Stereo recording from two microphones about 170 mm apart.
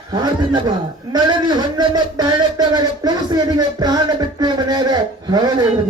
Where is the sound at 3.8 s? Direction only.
25° right (ahead or behind).